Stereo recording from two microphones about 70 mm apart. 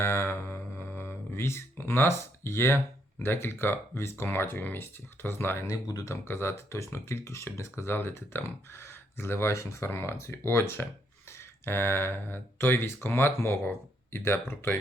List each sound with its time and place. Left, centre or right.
0.0 s a sound: left
3.2 s speech: left
5.6 s speech: left
6.2 s speech: left